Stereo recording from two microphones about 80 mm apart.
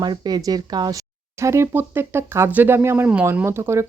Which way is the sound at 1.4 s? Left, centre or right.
Right.